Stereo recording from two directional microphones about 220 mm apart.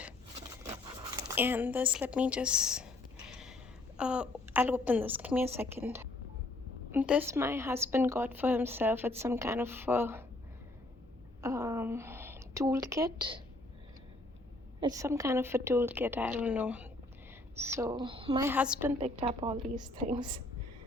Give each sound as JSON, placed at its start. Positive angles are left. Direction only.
{"t": 0.6, "sound": "zipper", "side_deg": -15}
{"t": 3.9, "sound": "a woman's voice", "side_deg": -5}
{"t": 11.4, "sound": "a woman's voice", "side_deg": -10}
{"t": 14.8, "sound": "a woman's voice", "side_deg": -15}
{"t": 18.4, "sound": "a woman's voice", "side_deg": -5}
{"t": 19.2, "sound": "a woman's voice", "side_deg": -25}